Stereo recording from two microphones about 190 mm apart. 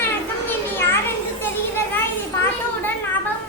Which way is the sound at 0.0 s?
10° left (ahead or behind).